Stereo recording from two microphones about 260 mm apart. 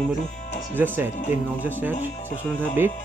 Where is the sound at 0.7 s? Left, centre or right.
Centre.